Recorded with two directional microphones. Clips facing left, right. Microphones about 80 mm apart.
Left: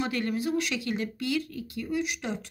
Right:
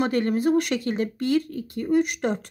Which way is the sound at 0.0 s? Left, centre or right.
Right.